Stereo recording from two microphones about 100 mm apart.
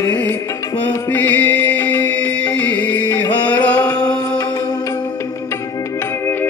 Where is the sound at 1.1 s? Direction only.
15° left (ahead or behind).